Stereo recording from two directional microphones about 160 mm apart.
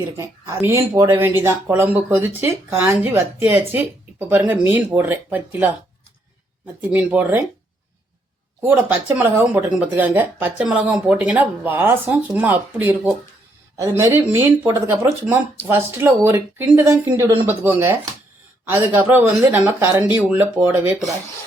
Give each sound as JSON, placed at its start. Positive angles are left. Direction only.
{"t": 0.2, "sound": "speech", "side_deg": -15}
{"t": 6.9, "sound": "speech", "side_deg": -10}
{"t": 8.6, "sound": "speech", "side_deg": -10}